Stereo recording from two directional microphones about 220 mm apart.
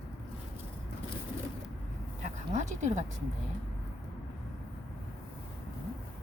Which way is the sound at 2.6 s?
30° right (ahead or behind).